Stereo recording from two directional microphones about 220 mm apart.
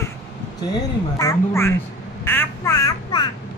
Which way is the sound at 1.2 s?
15° left (ahead or behind).